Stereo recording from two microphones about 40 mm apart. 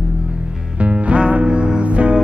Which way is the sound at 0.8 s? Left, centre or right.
Right.